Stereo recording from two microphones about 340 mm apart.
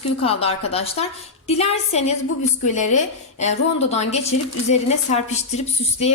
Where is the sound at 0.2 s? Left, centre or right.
Centre.